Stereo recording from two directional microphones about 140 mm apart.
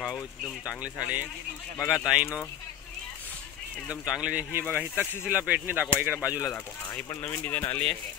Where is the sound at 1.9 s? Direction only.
5° right (ahead or behind).